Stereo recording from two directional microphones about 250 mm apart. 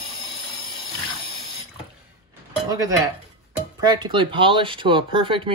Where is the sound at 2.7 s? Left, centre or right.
Centre.